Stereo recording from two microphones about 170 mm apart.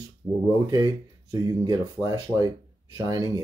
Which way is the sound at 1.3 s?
20° right (ahead or behind).